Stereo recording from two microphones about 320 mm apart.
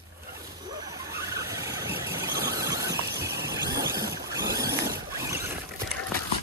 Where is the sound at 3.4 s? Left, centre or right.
Centre.